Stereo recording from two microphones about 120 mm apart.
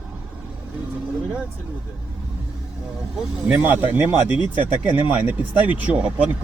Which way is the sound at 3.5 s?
15° right (ahead or behind).